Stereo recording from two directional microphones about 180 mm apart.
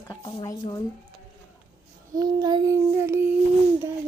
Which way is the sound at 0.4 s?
20° left (ahead or behind).